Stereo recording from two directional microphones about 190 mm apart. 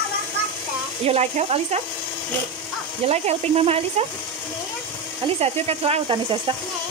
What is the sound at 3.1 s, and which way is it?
Speech, 35° right (ahead or behind).